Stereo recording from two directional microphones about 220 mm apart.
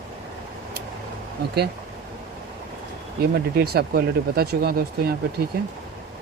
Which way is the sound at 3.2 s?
45° right (ahead or behind).